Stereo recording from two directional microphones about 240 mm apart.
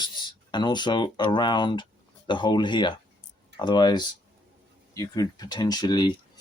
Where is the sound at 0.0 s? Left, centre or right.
Centre.